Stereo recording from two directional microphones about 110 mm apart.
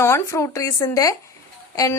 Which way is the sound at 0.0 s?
25° left (ahead or behind).